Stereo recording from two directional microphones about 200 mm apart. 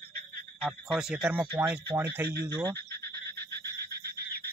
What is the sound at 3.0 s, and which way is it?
Frog, 55° right (ahead or behind).